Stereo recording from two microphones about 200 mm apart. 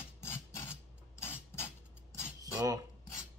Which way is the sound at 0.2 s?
15° left (ahead or behind).